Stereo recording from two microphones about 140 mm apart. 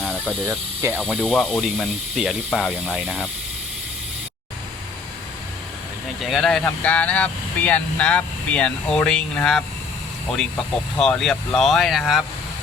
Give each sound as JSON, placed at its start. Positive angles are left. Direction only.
{"t": 0.4, "sound": "speech", "side_deg": -15}
{"t": 1.1, "sound": "speech", "side_deg": 0}
{"t": 6.2, "sound": "speech", "side_deg": 0}
{"t": 11.0, "sound": "speech", "side_deg": 5}